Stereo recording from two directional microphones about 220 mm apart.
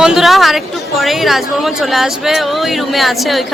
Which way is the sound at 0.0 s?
Centre (ahead or behind).